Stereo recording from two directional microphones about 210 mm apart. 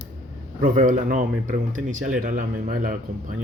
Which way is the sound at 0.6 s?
40° right (ahead or behind).